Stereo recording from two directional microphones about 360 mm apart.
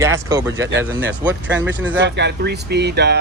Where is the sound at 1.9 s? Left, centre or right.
Right.